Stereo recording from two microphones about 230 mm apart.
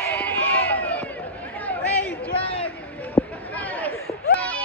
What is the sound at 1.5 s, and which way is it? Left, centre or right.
Chatter, centre.